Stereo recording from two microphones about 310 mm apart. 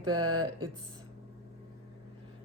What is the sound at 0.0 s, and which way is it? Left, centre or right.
Speech, centre.